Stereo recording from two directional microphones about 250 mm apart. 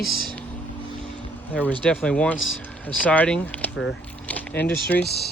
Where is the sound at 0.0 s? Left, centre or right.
Centre.